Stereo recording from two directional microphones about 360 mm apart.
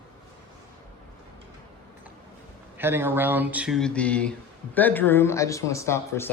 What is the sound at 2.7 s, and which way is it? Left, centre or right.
Speech, centre.